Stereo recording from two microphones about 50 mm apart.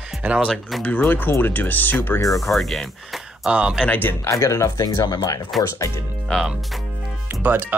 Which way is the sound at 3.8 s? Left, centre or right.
Left.